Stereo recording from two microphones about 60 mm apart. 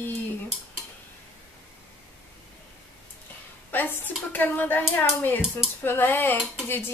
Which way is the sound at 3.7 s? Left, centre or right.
Left.